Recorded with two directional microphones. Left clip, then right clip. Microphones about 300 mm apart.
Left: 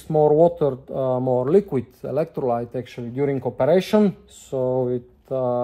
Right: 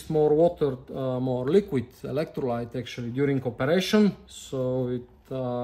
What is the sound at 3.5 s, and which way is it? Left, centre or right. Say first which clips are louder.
Speech: left 6 dB; centre.